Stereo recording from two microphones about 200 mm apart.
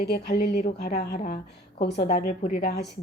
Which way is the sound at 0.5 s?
45° left (ahead or behind).